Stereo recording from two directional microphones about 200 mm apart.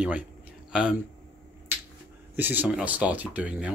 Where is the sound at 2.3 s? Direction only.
10° right (ahead or behind).